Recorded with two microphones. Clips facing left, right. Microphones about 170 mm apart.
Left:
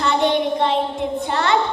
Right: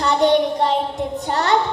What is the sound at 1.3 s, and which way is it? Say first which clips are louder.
Speech: right 1 dB; 40° right (ahead or behind).